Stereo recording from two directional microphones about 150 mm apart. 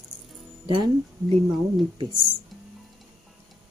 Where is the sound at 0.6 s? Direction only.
30° right (ahead or behind).